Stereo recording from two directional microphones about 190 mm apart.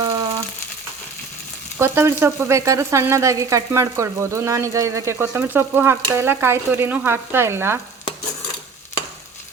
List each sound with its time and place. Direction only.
0.0 s frying: 20° right (ahead or behind)
1.8 s frying: 15° right (ahead or behind)